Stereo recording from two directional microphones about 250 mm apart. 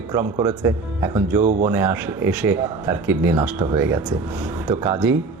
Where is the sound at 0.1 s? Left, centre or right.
Centre.